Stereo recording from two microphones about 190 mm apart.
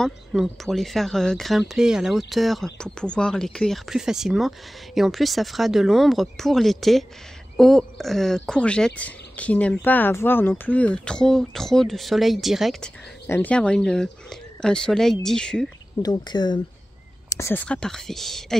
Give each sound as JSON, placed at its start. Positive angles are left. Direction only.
{"t": 0.0, "sound": "speech", "side_deg": 0}
{"t": 16.0, "sound": "speech", "side_deg": 20}